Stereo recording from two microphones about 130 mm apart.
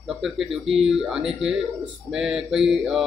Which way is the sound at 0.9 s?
5° right (ahead or behind).